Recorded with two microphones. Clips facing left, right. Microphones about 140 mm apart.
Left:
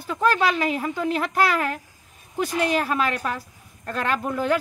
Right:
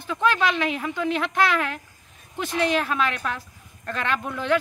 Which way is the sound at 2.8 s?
40° left (ahead or behind).